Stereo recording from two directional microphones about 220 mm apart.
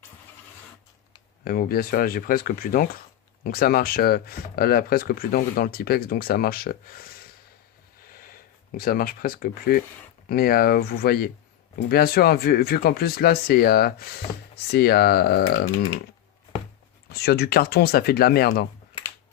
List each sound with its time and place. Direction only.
1.5 s speech: 45° left (ahead or behind)
8.1 s speech: 40° left (ahead or behind)
17.1 s speech: 45° left (ahead or behind)